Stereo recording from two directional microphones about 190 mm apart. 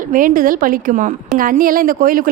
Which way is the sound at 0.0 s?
45° right (ahead or behind).